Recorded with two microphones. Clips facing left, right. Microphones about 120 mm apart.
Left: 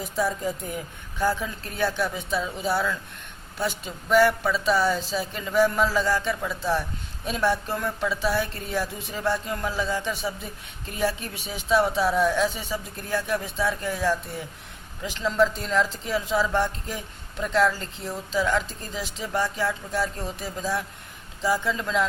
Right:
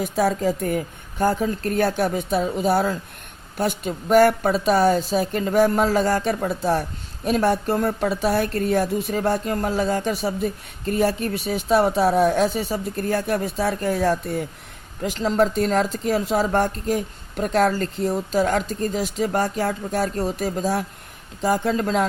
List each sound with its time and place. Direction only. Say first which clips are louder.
0.0 s a woman's voice: right 6 dB; 90° right
1.2 s speech: right 5 dB; 45° right (ahead or behind)